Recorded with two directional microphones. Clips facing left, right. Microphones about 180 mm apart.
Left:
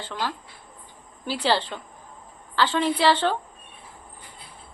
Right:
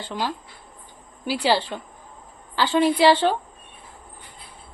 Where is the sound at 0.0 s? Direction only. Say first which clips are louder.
Right 2 dB; 15° right (ahead or behind).